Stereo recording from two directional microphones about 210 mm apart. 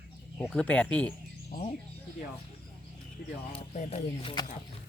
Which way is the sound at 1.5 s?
30° left (ahead or behind).